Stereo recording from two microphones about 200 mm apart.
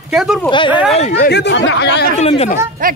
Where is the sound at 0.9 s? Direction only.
35° left (ahead or behind).